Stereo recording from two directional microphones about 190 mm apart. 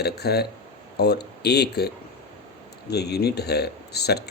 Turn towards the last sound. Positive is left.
turn(degrees=60)  # may be behind; listen again after turning